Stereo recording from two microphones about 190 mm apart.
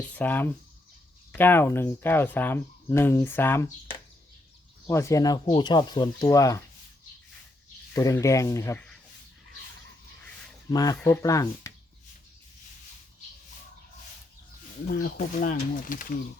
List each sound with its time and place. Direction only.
0.1 s speech: 10° left (ahead or behind)
4.9 s speech: 15° left (ahead or behind)
7.9 s speech: 15° left (ahead or behind)
10.7 s speech: 20° left (ahead or behind)
15.0 s speech: 45° left (ahead or behind)